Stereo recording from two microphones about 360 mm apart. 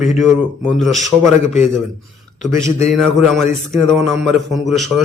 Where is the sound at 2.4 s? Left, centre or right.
Centre.